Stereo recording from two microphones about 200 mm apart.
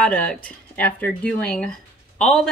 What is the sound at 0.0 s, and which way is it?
Speech, 5° left (ahead or behind).